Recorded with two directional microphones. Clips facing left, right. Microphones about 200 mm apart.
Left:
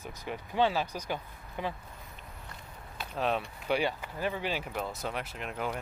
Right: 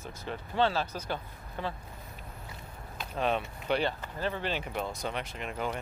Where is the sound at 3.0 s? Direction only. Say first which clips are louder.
Right 1 dB; 5° left (ahead or behind).